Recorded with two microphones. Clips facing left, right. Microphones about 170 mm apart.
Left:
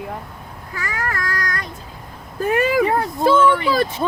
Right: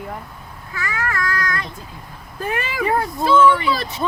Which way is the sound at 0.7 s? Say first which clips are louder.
Right 1 dB; 40° left (ahead or behind).